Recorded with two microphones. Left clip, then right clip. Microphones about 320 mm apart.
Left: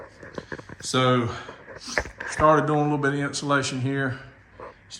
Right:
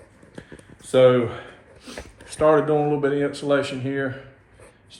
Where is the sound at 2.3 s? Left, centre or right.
Centre.